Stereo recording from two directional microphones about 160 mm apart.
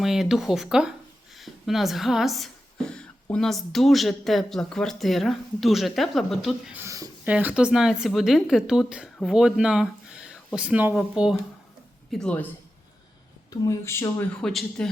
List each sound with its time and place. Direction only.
0.0 s speech: 5° right (ahead or behind)
6.7 s speech: 20° right (ahead or behind)
7.3 s speech: 5° right (ahead or behind)
12.1 s speech: 5° left (ahead or behind)
13.5 s speech: 20° left (ahead or behind)
14.4 s speech: 5° left (ahead or behind)